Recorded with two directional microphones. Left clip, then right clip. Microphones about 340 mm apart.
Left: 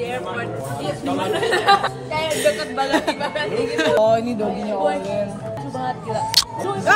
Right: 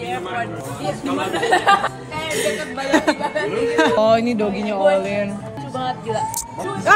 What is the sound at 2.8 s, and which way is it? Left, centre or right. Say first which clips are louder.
Speech: right 3 dB; centre.